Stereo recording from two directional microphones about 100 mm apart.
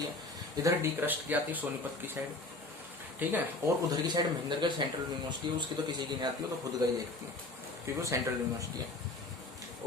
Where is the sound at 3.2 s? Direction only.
20° right (ahead or behind).